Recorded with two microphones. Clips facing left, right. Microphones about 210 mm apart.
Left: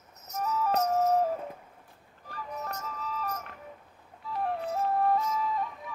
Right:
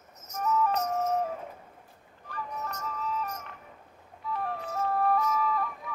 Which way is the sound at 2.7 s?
35° left (ahead or behind).